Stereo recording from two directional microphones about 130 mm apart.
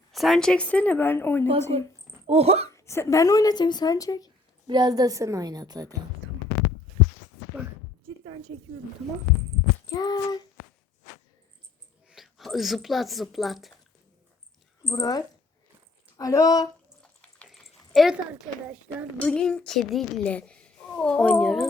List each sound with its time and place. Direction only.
0.1 s speech: centre (ahead or behind); by 1.5 s 15° left (ahead or behind)
2.2 s speech: 50° right (ahead or behind)
2.7 s speech: 20° left (ahead or behind)
4.6 s a woman's voice: 35° right (ahead or behind)
8.0 s a sound: 40° right (ahead or behind)
9.9 s a sound: 30° left (ahead or behind)
12.0 s speech: centre (ahead or behind)
14.9 s speech: 30° left (ahead or behind)
17.0 s a sound: 5° left (ahead or behind)
19.2 s speech: 5° left (ahead or behind)